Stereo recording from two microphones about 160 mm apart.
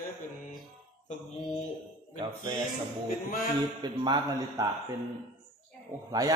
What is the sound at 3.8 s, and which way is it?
Speech, 25° right (ahead or behind).